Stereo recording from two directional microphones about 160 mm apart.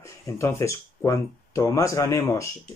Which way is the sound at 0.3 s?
20° left (ahead or behind).